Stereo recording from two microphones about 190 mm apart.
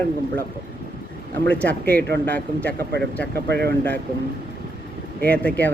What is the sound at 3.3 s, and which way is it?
Speech, 60° right (ahead or behind).